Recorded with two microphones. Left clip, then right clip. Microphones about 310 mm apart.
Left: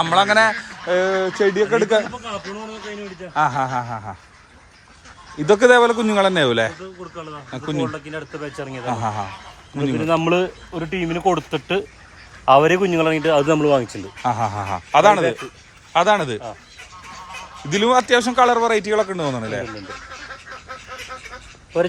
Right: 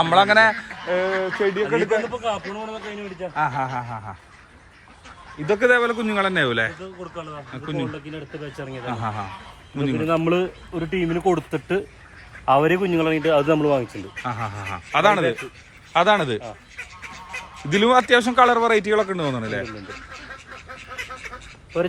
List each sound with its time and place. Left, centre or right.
0.0 s a man's voice: centre
2.1 s a man's voice: centre
3.3 s speech: centre
5.5 s speech: centre
10.1 s speech: left
14.3 s a man's voice: centre
17.7 s a man's voice: centre